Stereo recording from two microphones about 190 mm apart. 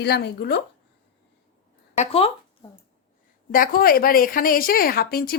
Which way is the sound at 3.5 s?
50° left (ahead or behind).